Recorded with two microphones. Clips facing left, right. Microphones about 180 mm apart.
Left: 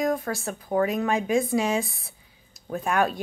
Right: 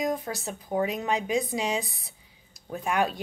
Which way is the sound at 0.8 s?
20° right (ahead or behind).